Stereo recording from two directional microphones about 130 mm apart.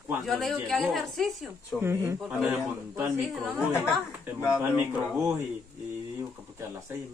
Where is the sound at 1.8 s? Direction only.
20° right (ahead or behind).